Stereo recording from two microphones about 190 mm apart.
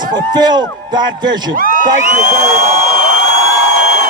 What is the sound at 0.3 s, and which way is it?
Speech, 20° right (ahead or behind).